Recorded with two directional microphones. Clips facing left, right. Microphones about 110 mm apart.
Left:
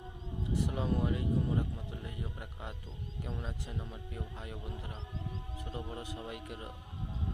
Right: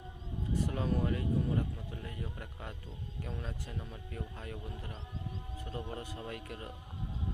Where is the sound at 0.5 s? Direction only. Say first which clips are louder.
Even; 20° left (ahead or behind).